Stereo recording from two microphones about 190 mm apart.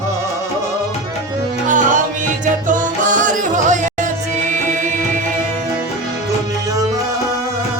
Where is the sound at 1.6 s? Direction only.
40° right (ahead or behind).